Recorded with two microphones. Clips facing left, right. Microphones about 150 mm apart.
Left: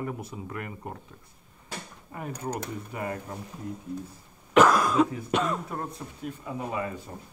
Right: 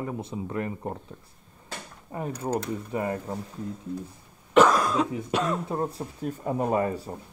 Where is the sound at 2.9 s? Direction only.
30° right (ahead or behind).